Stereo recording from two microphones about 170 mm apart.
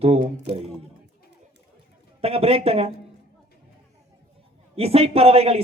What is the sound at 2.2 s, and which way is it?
Speech, 35° right (ahead or behind).